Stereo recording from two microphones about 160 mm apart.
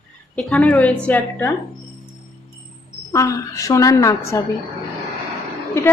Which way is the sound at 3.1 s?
20° left (ahead or behind).